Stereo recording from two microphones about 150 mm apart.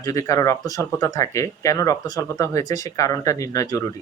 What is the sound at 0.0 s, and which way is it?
Speech, 20° left (ahead or behind).